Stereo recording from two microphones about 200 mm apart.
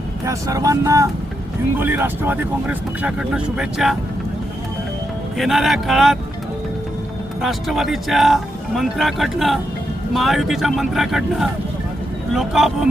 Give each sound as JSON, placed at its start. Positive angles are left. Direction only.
{"t": 0.3, "sound": "speech", "side_deg": -15}
{"t": 5.4, "sound": "speech", "side_deg": 0}
{"t": 7.4, "sound": "speech", "side_deg": 0}